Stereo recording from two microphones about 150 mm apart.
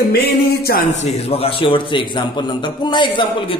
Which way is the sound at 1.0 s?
45° left (ahead or behind).